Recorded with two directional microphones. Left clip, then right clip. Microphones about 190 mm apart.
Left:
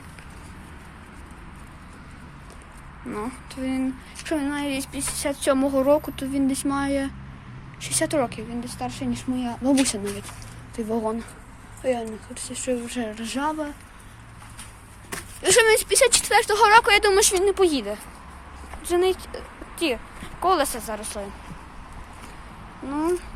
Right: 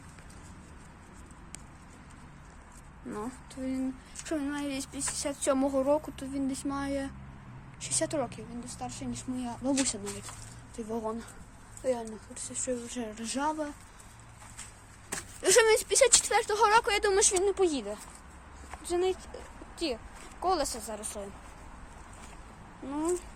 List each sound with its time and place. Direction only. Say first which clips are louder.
3.1 s speech: left 7 dB; 20° right (ahead or behind); by 9.2 s 20° left (ahead or behind)
9.3 s speech: left 9 dB; 5° left (ahead or behind); by 13.7 s 20° right (ahead or behind)
15.4 s speech: left 6 dB; 35° right (ahead or behind)
15.7 s speech: left 5 dB; 20° right (ahead or behind); by 21.2 s centre (ahead or behind)
22.9 s speech: left 7 dB; 10° right (ahead or behind)